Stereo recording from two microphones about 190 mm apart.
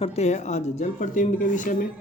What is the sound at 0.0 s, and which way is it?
Speech, 35° left (ahead or behind).